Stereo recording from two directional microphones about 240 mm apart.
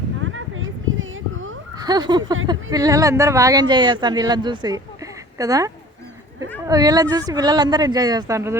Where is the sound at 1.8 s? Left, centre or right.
Centre.